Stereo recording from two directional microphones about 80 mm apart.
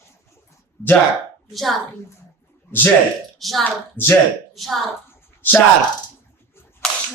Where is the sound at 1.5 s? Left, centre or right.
Centre.